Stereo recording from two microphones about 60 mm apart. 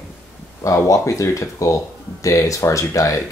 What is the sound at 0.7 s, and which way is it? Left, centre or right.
Speech, left.